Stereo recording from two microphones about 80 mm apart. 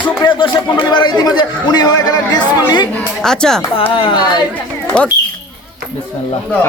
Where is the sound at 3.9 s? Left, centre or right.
Left.